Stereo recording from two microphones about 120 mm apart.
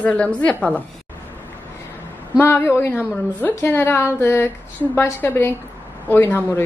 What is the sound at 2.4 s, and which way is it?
A woman's voice, 20° left (ahead or behind).